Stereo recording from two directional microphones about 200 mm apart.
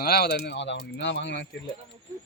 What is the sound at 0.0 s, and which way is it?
Speech, 50° left (ahead or behind).